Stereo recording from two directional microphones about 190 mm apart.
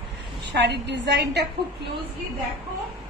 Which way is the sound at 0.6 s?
65° right (ahead or behind).